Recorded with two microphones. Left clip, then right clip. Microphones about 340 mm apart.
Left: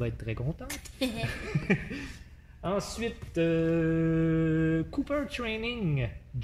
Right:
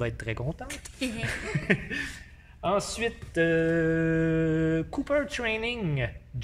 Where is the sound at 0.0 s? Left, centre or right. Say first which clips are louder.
Right 4 dB; right.